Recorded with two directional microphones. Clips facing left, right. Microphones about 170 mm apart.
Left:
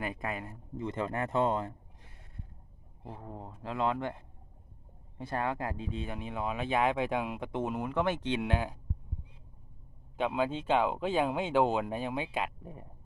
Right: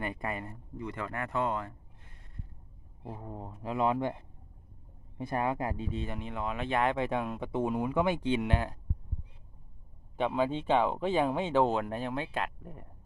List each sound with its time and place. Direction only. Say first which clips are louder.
0.0 s speech: right 1 dB; centre (ahead or behind)
0.8 s speech: left 3 dB; 25° left (ahead or behind)
3.0 s speech: right 2 dB; 10° right (ahead or behind)
5.9 s speech: right 1 dB; 5° left (ahead or behind)
7.6 s speech: right 3 dB; 10° right (ahead or behind)
8.4 s speech: right 1 dB; 5° left (ahead or behind)
10.2 s speech: right 1 dB; centre (ahead or behind)